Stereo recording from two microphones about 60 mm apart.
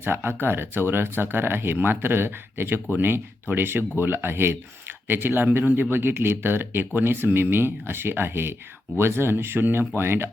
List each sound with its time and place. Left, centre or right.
0.0 s speech: right